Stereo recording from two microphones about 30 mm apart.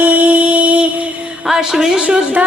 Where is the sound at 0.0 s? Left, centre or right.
Right.